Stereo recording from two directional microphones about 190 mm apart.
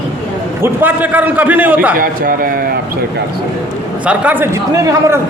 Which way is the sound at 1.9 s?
50° right (ahead or behind).